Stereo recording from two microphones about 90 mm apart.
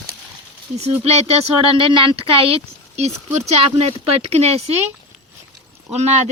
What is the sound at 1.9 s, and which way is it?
Speech, 80° right.